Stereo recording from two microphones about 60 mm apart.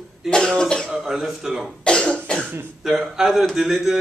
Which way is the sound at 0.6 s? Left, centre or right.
Centre.